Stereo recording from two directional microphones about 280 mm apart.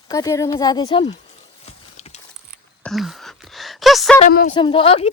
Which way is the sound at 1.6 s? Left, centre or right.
Left.